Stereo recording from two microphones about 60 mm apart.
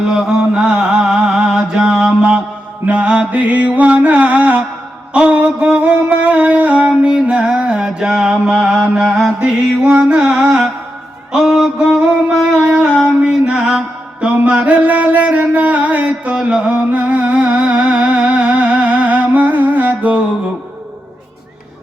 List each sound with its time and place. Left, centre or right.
0.1 s chant: centre
2.8 s music: centre
9.4 s music: centre
11.3 s a sound: centre
12.8 s music: centre
13.1 s mantra: centre
14.3 s music: centre